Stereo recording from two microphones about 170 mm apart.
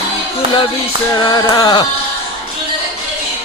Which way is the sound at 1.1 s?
25° left (ahead or behind).